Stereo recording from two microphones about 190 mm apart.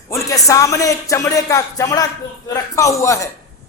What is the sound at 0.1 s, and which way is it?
A man's voice, 15° left (ahead or behind).